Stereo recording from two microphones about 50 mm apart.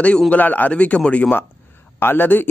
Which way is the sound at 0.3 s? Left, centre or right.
Left.